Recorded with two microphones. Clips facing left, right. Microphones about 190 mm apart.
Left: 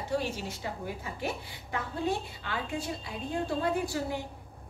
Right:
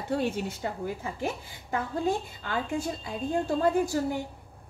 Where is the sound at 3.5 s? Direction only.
45° right (ahead or behind).